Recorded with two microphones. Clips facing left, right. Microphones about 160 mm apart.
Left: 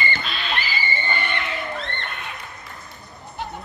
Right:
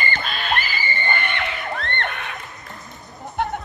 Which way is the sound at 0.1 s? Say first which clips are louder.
Right 3 dB; 50° right (ahead or behind).